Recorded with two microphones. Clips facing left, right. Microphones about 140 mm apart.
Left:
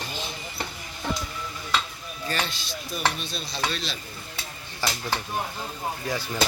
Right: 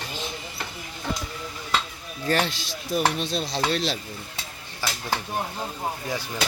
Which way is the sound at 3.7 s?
75° right (ahead or behind).